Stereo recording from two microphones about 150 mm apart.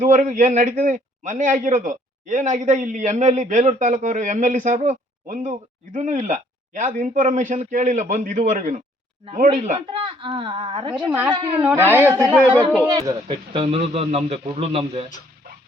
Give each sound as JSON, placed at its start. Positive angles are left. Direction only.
{"t": 0.0, "sound": "speech", "side_deg": -60}
{"t": 9.9, "sound": "speech", "side_deg": -35}
{"t": 10.9, "sound": "speech", "side_deg": -10}
{"t": 12.9, "sound": "speech", "side_deg": -25}